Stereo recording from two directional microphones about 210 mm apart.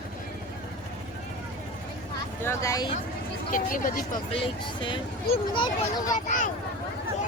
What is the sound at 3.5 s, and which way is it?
Speech, 40° left (ahead or behind).